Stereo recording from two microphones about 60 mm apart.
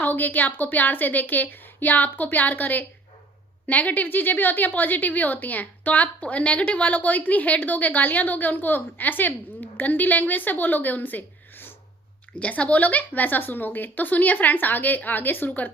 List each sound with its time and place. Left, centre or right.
0.0 s a woman's voice: left
12.4 s a woman's voice: left